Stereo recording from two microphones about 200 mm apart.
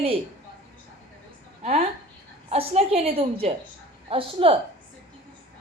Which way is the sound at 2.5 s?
30° right (ahead or behind).